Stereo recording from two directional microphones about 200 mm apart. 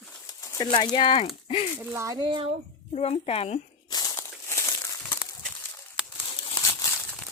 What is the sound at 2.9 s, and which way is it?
Speech, 30° left (ahead or behind).